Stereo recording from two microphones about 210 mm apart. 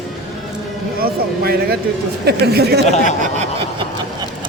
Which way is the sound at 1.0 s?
45° right (ahead or behind).